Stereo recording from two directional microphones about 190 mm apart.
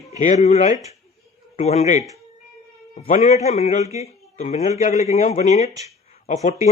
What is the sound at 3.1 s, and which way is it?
A man's voice, 35° left (ahead or behind).